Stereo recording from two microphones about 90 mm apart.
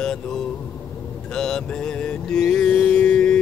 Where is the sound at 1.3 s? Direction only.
5° left (ahead or behind).